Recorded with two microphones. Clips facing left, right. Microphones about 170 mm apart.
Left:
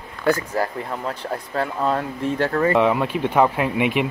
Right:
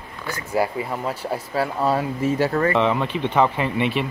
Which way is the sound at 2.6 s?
10° left (ahead or behind).